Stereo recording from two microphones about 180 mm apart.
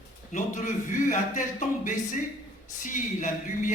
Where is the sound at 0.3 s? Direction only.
45° left (ahead or behind).